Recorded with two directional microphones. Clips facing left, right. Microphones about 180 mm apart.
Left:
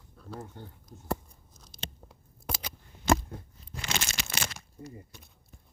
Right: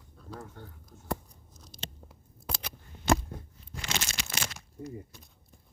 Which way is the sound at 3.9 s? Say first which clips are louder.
Left 1 dB; 65° left (ahead or behind).